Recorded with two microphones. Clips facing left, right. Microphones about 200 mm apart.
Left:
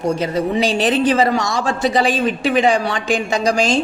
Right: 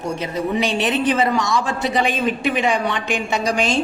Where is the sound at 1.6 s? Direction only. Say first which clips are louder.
Left 4 dB; 90° left.